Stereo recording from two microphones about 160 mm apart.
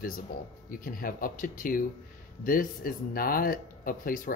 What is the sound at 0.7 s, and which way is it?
Speech, 60° left (ahead or behind).